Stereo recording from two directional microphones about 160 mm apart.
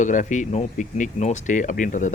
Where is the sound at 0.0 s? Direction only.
50° left (ahead or behind).